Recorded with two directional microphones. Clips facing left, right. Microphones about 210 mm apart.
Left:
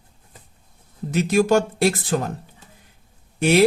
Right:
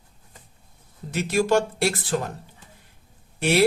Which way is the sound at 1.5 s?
45° left (ahead or behind).